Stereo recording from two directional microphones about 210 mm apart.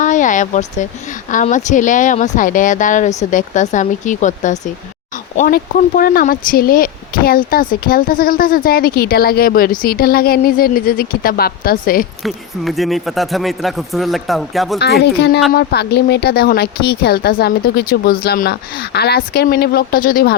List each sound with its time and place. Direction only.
0.0 s speech: 35° left (ahead or behind)
12.2 s speech: centre (ahead or behind)
14.8 s speech: 50° left (ahead or behind)